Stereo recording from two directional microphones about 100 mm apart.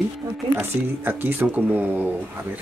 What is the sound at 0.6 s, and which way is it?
Speech, 20° right (ahead or behind).